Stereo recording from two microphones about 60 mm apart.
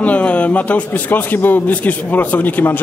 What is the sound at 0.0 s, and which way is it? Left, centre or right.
A man's voice, left.